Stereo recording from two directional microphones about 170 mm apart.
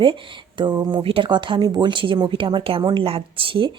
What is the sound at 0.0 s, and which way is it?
A woman's voice, 30° right (ahead or behind).